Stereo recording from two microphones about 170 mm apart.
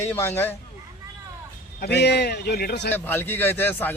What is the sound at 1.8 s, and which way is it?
A man's voice, 75° left (ahead or behind).